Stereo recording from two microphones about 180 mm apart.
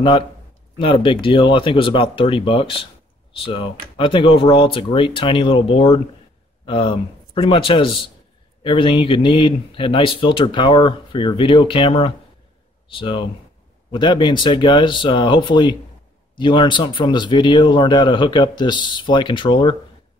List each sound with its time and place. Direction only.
0.7 s speech: 30° left (ahead or behind)